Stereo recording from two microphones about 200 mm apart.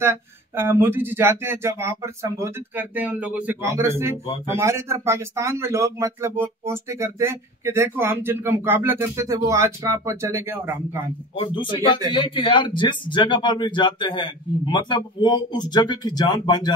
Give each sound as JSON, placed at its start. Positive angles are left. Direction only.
{"t": 0.0, "sound": "speech", "side_deg": -10}
{"t": 11.3, "sound": "speech", "side_deg": 25}